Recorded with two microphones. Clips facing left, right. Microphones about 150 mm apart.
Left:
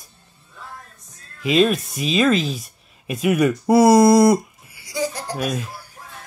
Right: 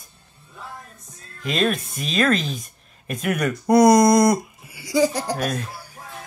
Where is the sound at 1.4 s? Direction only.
5° left (ahead or behind).